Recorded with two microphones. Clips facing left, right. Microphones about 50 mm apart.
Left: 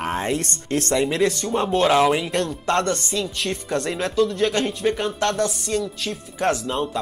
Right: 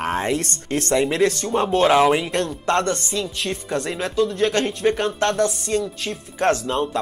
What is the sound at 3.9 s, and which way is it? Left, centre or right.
Speech, centre.